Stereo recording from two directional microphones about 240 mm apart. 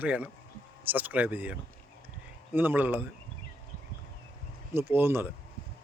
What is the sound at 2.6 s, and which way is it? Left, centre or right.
Speech, centre.